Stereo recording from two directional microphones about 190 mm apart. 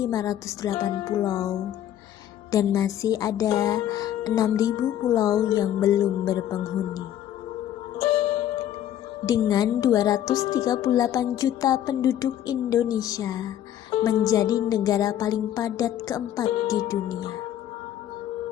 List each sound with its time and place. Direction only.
0.0 s speech: 20° left (ahead or behind)
9.2 s speech: 20° left (ahead or behind)